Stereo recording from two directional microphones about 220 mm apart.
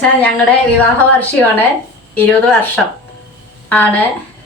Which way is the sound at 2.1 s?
10° left (ahead or behind).